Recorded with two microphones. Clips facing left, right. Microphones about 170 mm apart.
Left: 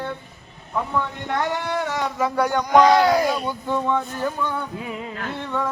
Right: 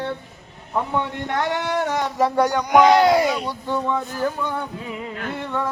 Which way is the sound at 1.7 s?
50° right (ahead or behind).